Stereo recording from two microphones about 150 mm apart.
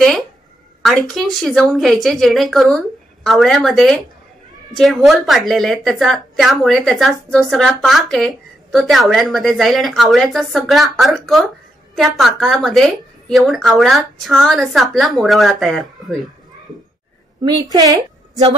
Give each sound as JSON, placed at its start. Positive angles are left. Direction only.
{"t": 0.8, "sound": "speech", "side_deg": 0}
{"t": 17.6, "sound": "a woman's voice", "side_deg": -25}